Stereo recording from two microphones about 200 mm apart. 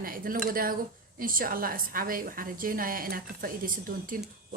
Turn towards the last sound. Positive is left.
turn(degrees=-45)  # may be behind; listen again after turning